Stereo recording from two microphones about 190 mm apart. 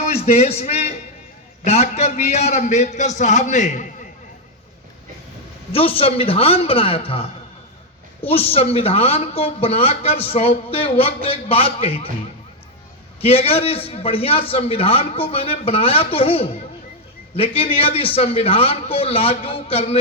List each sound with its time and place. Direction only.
0.0 s a sound: 35° left (ahead or behind)
1.6 s speech: 35° left (ahead or behind)
5.7 s a man's voice: 30° left (ahead or behind)
13.2 s a man's voice: 30° left (ahead or behind)